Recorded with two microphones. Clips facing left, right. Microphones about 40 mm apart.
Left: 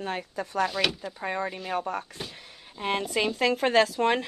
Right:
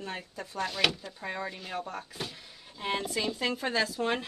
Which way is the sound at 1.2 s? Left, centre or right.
Left.